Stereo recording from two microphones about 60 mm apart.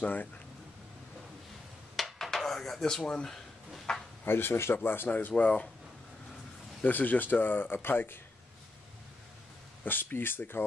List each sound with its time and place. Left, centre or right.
0.0 s speech: left
2.0 s dishes: centre
3.9 s a sound: centre
4.2 s speech: left
5.3 s speech: left
6.8 s speech: left
9.8 s speech: left